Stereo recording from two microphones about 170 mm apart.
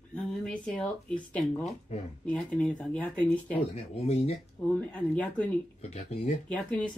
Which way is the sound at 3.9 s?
40° left (ahead or behind).